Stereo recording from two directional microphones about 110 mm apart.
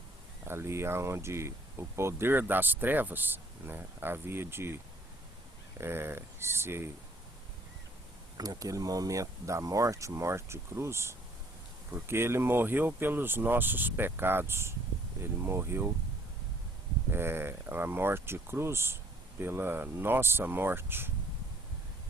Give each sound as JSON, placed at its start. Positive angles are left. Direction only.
{"t": 0.4, "sound": "speech", "side_deg": -25}
{"t": 8.4, "sound": "speech", "side_deg": -30}
{"t": 17.1, "sound": "speech", "side_deg": -20}